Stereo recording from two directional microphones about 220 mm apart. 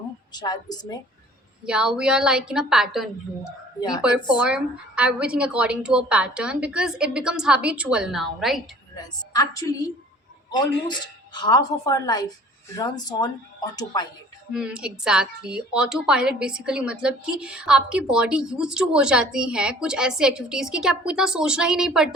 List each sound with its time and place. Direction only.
0.3 s a woman's voice: 20° left (ahead or behind)
1.6 s a woman's voice: 5° right (ahead or behind)
3.8 s a woman's voice: 20° left (ahead or behind)
4.4 s a woman's voice: 5° right (ahead or behind)
9.0 s a woman's voice: 15° left (ahead or behind)
14.5 s a woman's voice: 5° right (ahead or behind)